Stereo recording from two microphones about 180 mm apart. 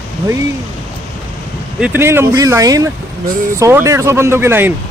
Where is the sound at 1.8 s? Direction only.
10° right (ahead or behind).